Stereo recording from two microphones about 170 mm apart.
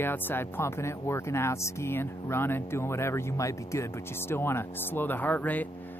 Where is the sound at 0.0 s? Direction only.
10° left (ahead or behind).